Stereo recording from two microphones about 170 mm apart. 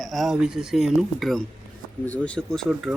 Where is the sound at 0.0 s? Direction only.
Centre (ahead or behind).